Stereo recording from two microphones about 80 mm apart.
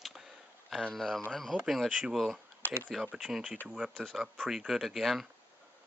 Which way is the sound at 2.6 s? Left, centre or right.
Left.